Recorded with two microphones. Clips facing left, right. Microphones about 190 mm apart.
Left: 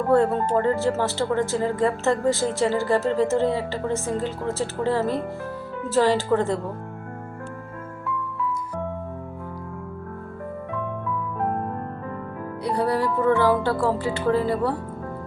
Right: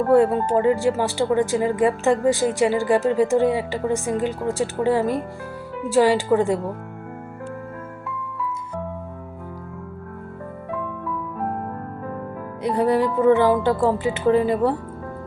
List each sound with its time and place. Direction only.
0.1 s speech: 10° right (ahead or behind)
12.6 s speech: 15° right (ahead or behind)